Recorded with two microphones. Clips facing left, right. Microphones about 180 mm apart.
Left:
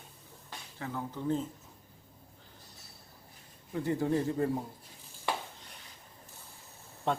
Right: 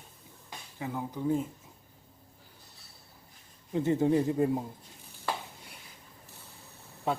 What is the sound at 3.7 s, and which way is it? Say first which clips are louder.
Speech: right 4 dB; 20° right (ahead or behind).